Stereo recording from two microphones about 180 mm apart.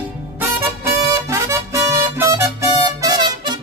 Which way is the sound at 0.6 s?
15° right (ahead or behind).